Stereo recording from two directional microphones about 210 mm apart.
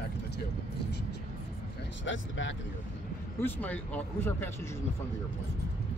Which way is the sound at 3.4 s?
5° left (ahead or behind).